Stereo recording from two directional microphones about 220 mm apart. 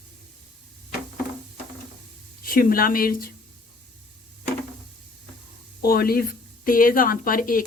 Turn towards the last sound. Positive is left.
turn(degrees=40)  # may be behind; listen again after turning